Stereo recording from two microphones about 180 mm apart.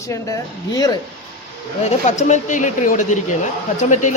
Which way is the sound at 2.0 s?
40° left (ahead or behind).